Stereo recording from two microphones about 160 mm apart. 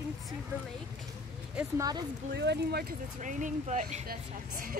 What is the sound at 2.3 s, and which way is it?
Speech, 90° right.